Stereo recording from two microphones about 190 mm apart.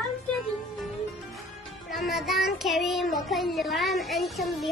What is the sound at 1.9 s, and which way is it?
Speech, centre (ahead or behind).